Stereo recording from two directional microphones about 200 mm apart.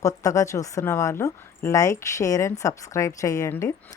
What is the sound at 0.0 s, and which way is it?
A woman's voice, 15° left (ahead or behind).